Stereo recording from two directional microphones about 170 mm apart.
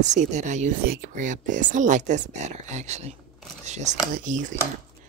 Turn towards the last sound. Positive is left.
turn(degrees=-45)  # may be behind; listen again after turning